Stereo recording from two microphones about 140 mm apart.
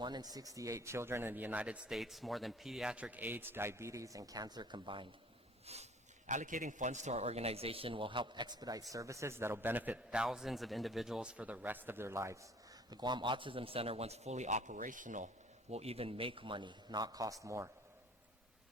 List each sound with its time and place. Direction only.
0.0 s speech: 30° right (ahead or behind)
5.6 s speech: 50° right (ahead or behind); by 12.5 s 20° right (ahead or behind)
12.9 s speech: 30° right (ahead or behind); by 15.3 s 65° right (ahead or behind)
15.7 s a man's voice: 45° right (ahead or behind); by 17.7 s 20° right (ahead or behind)